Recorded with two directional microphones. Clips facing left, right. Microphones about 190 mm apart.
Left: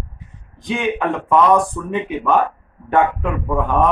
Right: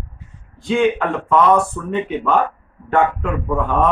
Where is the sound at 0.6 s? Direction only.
15° left (ahead or behind).